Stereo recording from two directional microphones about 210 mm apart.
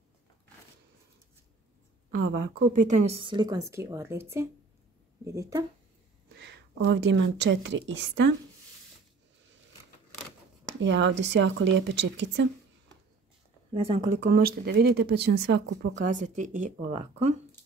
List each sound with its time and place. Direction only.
2.0 s a woman's voice: 40° right (ahead or behind); by 5.7 s 15° right (ahead or behind)
6.2 s speech: 50° right (ahead or behind)
10.8 s speech: 60° right (ahead or behind)
13.7 s speech: 25° right (ahead or behind)
14.1 s speech: 50° right (ahead or behind)
16.0 s speech: 35° right (ahead or behind)